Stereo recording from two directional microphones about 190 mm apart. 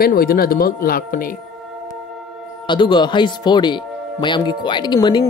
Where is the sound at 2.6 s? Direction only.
25° left (ahead or behind).